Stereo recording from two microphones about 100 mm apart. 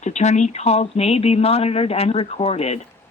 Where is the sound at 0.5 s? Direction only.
90° left.